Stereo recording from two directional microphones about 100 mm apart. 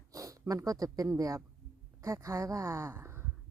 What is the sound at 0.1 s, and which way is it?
Speech, 35° right (ahead or behind).